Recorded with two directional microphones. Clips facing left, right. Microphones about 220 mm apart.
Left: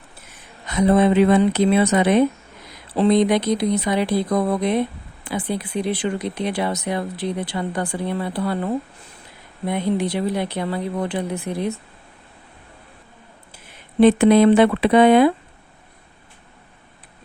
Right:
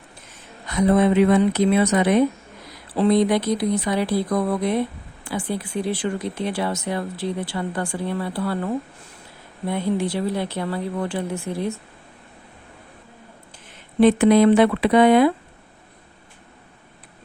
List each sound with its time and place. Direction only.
0.8 s speech: 25° left (ahead or behind)
14.0 s speech: 25° left (ahead or behind)